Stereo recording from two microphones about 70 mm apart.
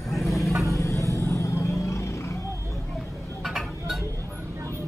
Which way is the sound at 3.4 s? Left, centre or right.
Centre.